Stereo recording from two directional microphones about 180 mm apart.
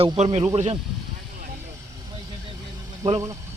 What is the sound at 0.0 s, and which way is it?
Speech, 30° right (ahead or behind).